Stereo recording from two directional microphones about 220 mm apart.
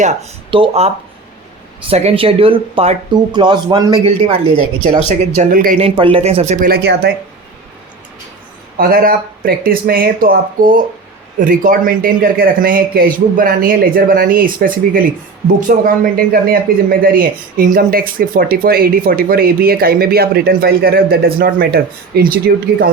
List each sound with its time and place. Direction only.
0.0 s speech: 30° right (ahead or behind)
1.9 s speech: 25° right (ahead or behind)
5.8 s speech: 25° right (ahead or behind)
6.7 s speech: 45° right (ahead or behind)
8.8 s speech: 40° right (ahead or behind)